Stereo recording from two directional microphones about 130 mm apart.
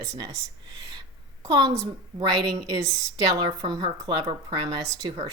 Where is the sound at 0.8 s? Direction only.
30° right (ahead or behind).